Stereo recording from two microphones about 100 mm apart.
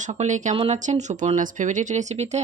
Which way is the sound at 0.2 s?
90° right.